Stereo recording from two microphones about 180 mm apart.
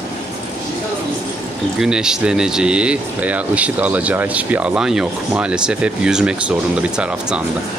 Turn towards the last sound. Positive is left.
turn(degrees=-5)  # may be behind; listen again after turning